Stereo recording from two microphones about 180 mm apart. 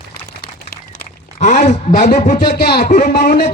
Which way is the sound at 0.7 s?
50° left (ahead or behind).